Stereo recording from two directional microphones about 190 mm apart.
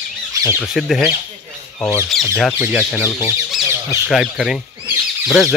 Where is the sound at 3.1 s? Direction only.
20° left (ahead or behind).